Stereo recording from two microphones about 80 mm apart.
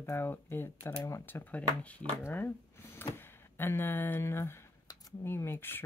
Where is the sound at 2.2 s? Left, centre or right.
Left.